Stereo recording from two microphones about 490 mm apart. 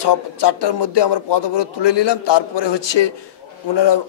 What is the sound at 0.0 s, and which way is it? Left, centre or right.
A man's voice, left.